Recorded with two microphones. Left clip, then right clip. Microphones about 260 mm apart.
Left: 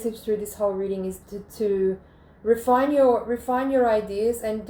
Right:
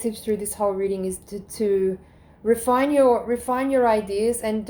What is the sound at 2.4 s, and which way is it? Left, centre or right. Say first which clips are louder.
A woman's voice: even; right.